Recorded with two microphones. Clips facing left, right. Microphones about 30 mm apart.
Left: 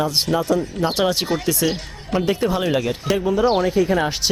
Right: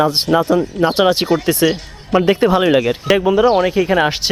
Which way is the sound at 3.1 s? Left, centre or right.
Right.